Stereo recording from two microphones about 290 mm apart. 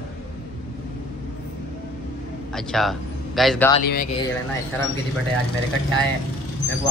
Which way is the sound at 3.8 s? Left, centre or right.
Left.